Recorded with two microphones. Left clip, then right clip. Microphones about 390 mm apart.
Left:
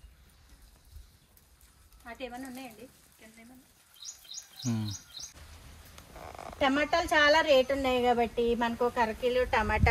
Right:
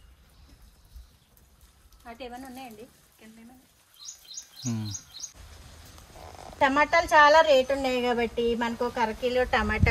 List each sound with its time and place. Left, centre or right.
2.1 s a woman's voice: centre
4.0 s wild animals: right
4.6 s a woman's voice: centre
6.6 s a woman's voice: centre